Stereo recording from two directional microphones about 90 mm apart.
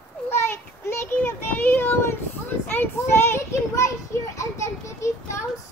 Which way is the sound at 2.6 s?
20° left (ahead or behind).